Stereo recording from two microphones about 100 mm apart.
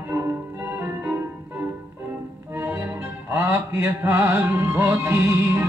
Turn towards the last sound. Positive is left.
turn(degrees=-25)  # may be behind; listen again after turning